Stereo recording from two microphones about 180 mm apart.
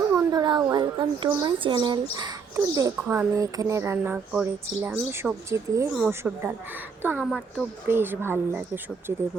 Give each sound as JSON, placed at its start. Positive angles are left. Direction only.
{"t": 0.1, "sound": "a woman's voice", "side_deg": -20}
{"t": 7.3, "sound": "speech", "side_deg": 5}
{"t": 7.9, "sound": "speech", "side_deg": -10}